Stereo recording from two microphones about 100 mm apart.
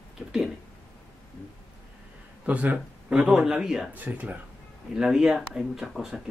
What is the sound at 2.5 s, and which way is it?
Speech, 15° right (ahead or behind).